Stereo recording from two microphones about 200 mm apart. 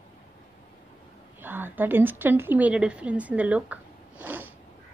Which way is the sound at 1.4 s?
10° right (ahead or behind).